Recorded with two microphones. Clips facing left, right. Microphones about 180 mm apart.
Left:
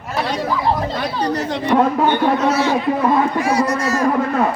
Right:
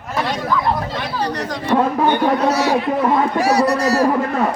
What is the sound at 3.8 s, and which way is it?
Speech, 35° right (ahead or behind).